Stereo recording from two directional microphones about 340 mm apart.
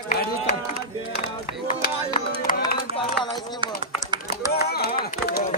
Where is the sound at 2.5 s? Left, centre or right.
Left.